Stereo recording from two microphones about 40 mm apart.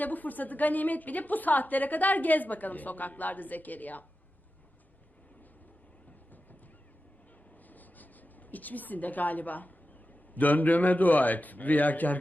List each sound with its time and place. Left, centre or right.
0.0 s a woman's voice: left
7.7 s writing: left
10.3 s a woman's voice: left